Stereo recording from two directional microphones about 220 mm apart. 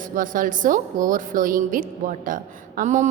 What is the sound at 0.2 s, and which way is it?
A woman's voice, 35° right (ahead or behind).